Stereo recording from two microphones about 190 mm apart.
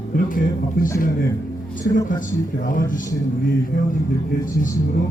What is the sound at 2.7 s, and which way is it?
Speech, 45° left (ahead or behind).